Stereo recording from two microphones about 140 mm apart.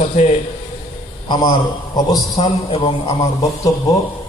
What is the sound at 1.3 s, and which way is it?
Speech, 30° left (ahead or behind).